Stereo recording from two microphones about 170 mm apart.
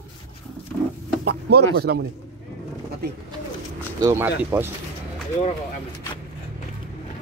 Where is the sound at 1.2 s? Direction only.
70° right (ahead or behind).